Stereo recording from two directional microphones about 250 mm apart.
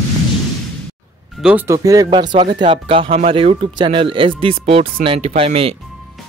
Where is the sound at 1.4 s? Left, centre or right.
Centre.